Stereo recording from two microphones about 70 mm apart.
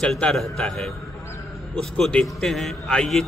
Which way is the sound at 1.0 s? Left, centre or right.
Left.